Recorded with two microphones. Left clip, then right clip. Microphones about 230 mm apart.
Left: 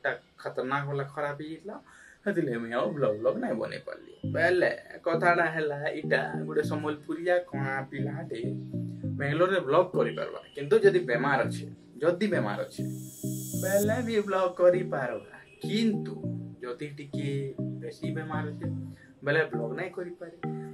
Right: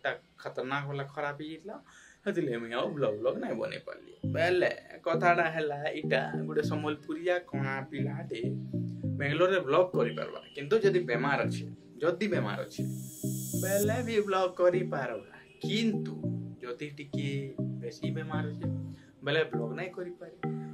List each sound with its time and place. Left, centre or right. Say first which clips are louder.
0.0 s speech: left 3 dB; centre
2.2 s speech: left 2 dB; centre